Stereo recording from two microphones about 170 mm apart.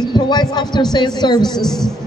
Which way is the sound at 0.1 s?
25° left (ahead or behind).